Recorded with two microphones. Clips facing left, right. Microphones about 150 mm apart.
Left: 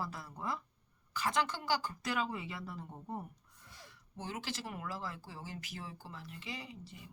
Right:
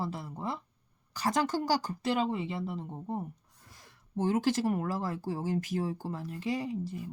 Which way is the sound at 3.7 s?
45° right (ahead or behind).